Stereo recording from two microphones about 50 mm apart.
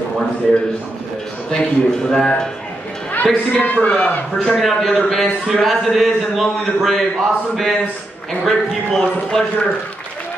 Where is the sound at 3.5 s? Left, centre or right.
Left.